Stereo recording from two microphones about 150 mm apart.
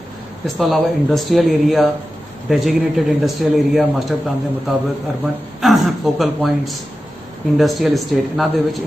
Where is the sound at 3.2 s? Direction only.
Centre (ahead or behind).